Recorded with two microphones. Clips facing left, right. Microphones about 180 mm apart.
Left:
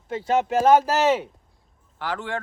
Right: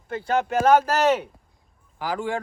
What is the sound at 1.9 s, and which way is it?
Speech, 10° right (ahead or behind).